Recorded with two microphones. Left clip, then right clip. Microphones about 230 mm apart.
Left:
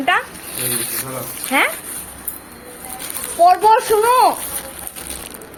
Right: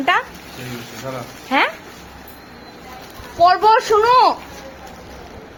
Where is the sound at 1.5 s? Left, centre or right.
Centre.